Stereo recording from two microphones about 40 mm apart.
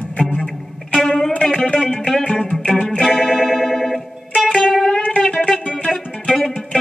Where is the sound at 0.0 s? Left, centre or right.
Left.